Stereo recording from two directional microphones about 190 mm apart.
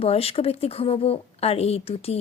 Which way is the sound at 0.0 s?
30° left (ahead or behind).